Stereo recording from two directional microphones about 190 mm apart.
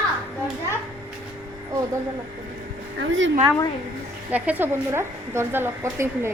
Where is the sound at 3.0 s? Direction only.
80° right.